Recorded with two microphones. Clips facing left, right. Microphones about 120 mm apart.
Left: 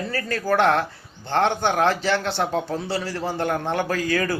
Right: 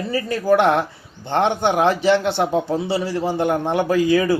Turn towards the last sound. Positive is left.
turn(degrees=-20)  # may be behind; listen again after turning